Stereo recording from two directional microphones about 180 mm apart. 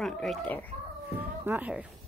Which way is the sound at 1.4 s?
10° right (ahead or behind).